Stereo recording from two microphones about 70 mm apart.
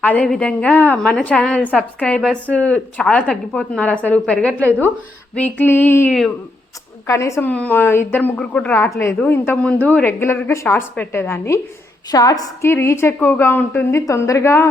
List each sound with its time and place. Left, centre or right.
0.0 s a woman's voice: left
5.6 s a woman's voice: left
7.1 s a woman's voice: left
7.4 s speech: left
8.4 s a woman's voice: centre
9.2 s a woman's voice: left
9.6 s a woman's voice: centre; by 11.6 s left
12.1 s a woman's voice: left
12.6 s a woman's voice: left
13.1 s speech: left
14.1 s a woman's voice: left